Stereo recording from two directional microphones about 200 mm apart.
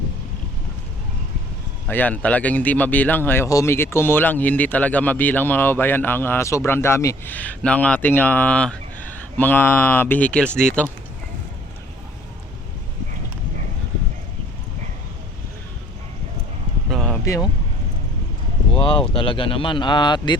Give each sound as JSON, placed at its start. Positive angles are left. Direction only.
{"t": 1.9, "sound": "speech", "side_deg": 10}
{"t": 16.9, "sound": "a sound", "side_deg": 0}
{"t": 17.2, "sound": "speech", "side_deg": 15}
{"t": 18.7, "sound": "speech", "side_deg": 25}